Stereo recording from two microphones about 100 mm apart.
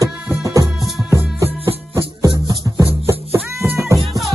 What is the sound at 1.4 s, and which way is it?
Music, 25° right (ahead or behind).